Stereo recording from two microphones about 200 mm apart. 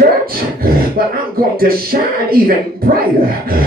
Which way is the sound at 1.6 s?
50° right (ahead or behind).